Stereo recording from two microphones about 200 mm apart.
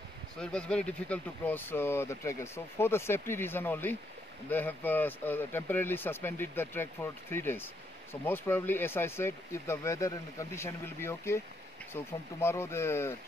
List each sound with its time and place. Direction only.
0.4 s speech: 5° left (ahead or behind)